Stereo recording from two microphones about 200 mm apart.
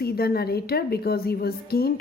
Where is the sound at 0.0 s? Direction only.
50° left (ahead or behind).